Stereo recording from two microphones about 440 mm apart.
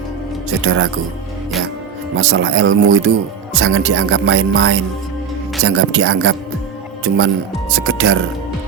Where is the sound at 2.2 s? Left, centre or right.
Right.